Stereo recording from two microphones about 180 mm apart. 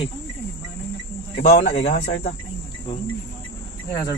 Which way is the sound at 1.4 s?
50° left (ahead or behind).